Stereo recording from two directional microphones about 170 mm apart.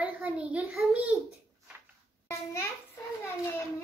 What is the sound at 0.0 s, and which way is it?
Speech, 10° right (ahead or behind).